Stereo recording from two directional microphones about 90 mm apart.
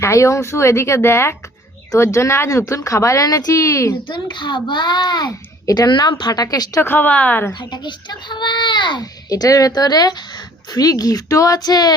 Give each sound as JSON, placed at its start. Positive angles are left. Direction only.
{"t": 0.0, "sound": "speech", "side_deg": 35}
{"t": 4.1, "sound": "a child's voice", "side_deg": 60}
{"t": 6.8, "sound": "speech", "side_deg": 20}
{"t": 7.6, "sound": "a child's voice", "side_deg": 55}
{"t": 9.3, "sound": "a child's voice", "side_deg": 40}